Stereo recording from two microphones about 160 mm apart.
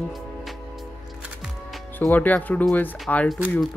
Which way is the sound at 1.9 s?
10° left (ahead or behind).